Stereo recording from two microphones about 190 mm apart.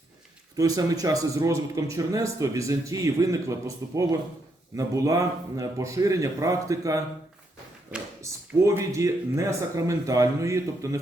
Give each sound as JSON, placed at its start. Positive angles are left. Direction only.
{"t": 0.5, "sound": "speech", "side_deg": -20}
{"t": 8.2, "sound": "speech", "side_deg": -15}